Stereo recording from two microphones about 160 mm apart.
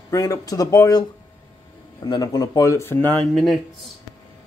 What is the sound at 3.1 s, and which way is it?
Speech, centre (ahead or behind).